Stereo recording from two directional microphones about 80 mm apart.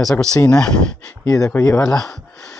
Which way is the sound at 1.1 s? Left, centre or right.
Left.